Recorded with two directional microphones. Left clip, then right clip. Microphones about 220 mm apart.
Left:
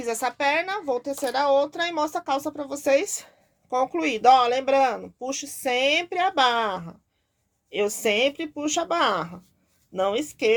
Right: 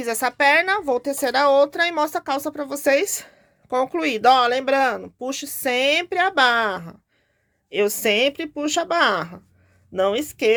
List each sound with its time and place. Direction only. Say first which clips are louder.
0.0 s speech: right 5 dB; 30° right (ahead or behind)